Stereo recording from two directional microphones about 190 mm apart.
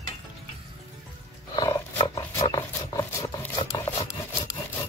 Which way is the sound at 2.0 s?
20° left (ahead or behind).